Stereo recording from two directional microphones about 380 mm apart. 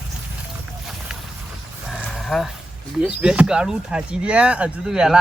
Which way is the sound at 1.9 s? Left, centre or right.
Centre.